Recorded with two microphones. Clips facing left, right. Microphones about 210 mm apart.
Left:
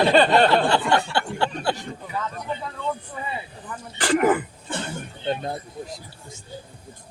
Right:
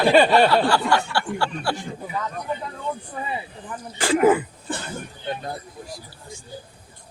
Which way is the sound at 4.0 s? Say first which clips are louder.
Right 2 dB; 10° right (ahead or behind).